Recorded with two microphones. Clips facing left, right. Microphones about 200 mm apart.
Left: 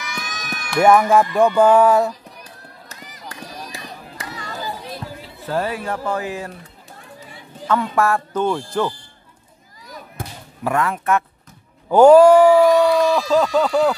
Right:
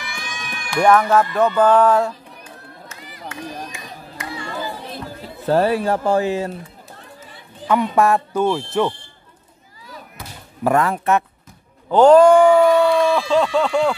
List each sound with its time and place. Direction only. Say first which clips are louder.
0.1 s run: left 2 dB; 40° left (ahead or behind)
0.8 s music: left 1 dB; 10° left (ahead or behind)
2.4 s run: right 3 dB; 40° left (ahead or behind)
3.7 s a sound: left 1 dB; 40° left (ahead or behind)
5.2 s speech: right 7 dB; 40° right (ahead or behind); by 6.5 s 25° right (ahead or behind)
7.6 s speech: right 2 dB; 15° right (ahead or behind)
10.2 s a sound: left 7 dB; 50° left (ahead or behind)
10.6 s speech: right 3 dB; 35° right (ahead or behind)
11.9 s music: left 1 dB; 10° left (ahead or behind)
13.3 s speech: left 1 dB; 5° left (ahead or behind)